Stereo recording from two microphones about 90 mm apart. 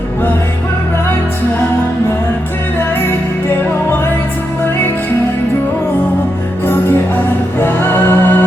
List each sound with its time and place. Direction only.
7.6 s music: 25° left (ahead or behind)